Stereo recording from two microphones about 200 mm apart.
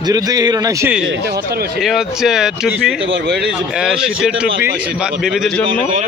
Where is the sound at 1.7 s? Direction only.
Centre (ahead or behind).